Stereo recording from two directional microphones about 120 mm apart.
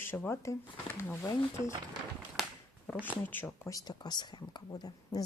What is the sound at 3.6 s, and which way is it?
Speech, 30° left (ahead or behind).